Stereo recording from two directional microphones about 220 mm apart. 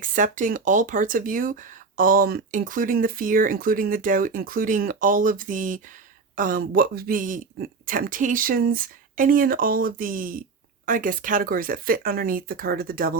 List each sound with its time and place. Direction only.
0.0 s speech: 35° right (ahead or behind)